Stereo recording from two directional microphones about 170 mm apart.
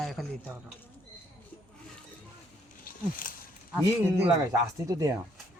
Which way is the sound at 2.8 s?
55° left (ahead or behind).